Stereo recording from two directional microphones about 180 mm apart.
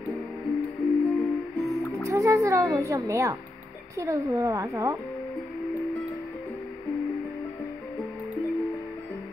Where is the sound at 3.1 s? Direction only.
15° right (ahead or behind).